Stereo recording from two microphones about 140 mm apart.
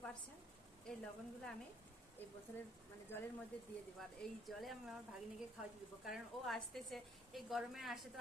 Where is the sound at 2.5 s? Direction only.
20° left (ahead or behind).